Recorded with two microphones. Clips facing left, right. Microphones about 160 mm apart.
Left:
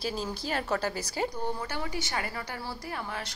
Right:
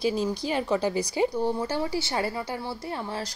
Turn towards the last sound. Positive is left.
turn(degrees=-30)  # may be behind; listen again after turning